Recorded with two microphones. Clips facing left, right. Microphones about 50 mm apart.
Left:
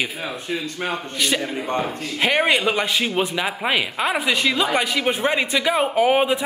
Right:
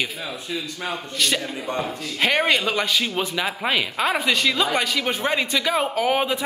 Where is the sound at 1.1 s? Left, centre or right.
Centre.